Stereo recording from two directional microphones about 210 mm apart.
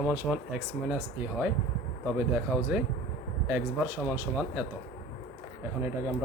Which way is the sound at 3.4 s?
10° right (ahead or behind).